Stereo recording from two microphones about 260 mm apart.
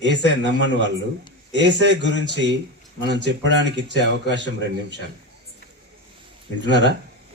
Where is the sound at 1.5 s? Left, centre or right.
Right.